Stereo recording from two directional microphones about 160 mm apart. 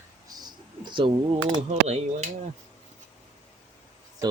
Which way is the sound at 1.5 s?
45° right (ahead or behind).